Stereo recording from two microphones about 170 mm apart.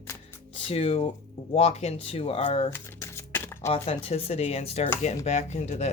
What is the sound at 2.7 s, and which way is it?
Shuffling cards, 15° left (ahead or behind).